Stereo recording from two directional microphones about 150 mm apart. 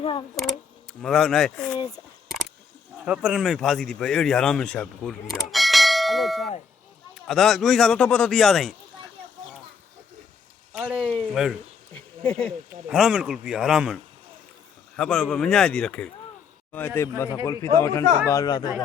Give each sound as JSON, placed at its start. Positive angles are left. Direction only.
{"t": 0.0, "sound": "speech", "side_deg": 35}
{"t": 1.0, "sound": "speech", "side_deg": 0}
{"t": 3.0, "sound": "speech", "side_deg": -5}
{"t": 10.8, "sound": "a man's voice", "side_deg": -5}